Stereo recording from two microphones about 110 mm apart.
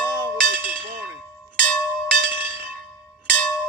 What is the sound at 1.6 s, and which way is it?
Bell, 10° left (ahead or behind).